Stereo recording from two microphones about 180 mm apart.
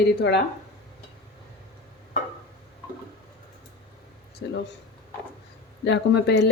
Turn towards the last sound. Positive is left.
turn(degrees=70)  # may be behind; listen again after turning